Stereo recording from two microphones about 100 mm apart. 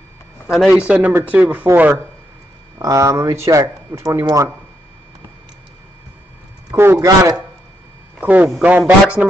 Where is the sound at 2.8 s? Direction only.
35° right (ahead or behind).